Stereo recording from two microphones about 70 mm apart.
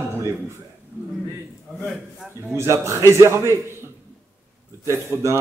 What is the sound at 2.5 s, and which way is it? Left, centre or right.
A man's voice, right.